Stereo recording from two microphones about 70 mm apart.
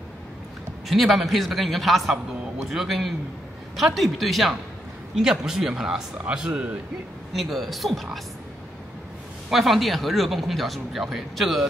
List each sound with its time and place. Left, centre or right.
0.8 s speech: centre
7.3 s speech: centre
9.5 s speech: centre